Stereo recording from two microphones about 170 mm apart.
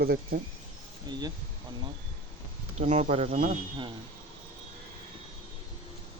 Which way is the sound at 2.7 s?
45° right (ahead or behind).